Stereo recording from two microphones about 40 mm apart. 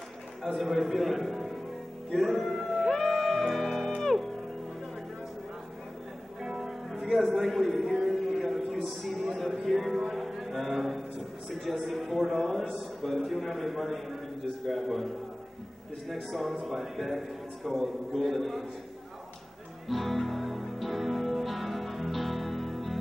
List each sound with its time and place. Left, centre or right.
0.6 s a man's voice: centre
2.0 s music: centre
6.4 s music: centre
10.6 s a sound: centre
12.7 s a man's voice: centre
16.1 s a man's voice: centre
19.9 s music: centre